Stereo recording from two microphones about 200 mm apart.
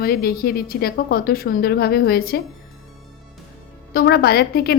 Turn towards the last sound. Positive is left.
turn(degrees=50)  # may be behind; listen again after turning